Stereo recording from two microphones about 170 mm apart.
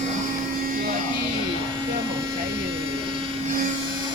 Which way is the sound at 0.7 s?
55° right (ahead or behind).